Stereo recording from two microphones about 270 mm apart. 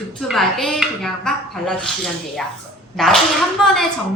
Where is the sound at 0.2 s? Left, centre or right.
Centre.